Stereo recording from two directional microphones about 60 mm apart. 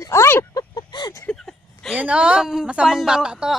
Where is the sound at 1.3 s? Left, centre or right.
Centre.